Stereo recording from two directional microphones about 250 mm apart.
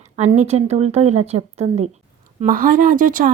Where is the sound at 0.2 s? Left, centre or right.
Right.